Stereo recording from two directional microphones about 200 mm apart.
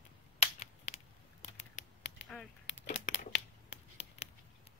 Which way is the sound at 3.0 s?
65° left (ahead or behind).